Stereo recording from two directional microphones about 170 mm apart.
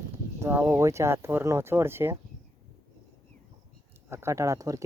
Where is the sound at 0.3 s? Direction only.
15° right (ahead or behind).